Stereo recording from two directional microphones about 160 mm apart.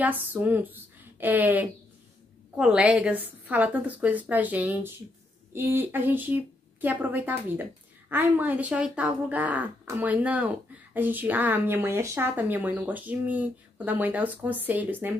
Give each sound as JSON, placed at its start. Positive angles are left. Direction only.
{"t": 0.0, "sound": "speech", "side_deg": -10}